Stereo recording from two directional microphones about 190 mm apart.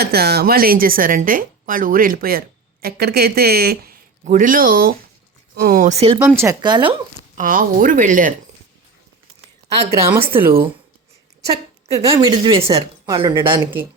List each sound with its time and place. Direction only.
0.0 s speech: 55° right (ahead or behind); by 6.1 s 35° right (ahead or behind)
6.1 s speech: 10° right (ahead or behind)
7.3 s speech: 45° right (ahead or behind)
10.1 s speech: 10° right (ahead or behind)
11.9 s speech: 20° right (ahead or behind)